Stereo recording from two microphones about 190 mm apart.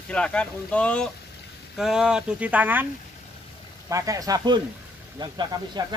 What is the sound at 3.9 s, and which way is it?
Speech, 15° right (ahead or behind).